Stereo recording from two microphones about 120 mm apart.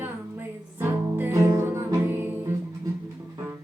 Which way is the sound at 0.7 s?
20° right (ahead or behind).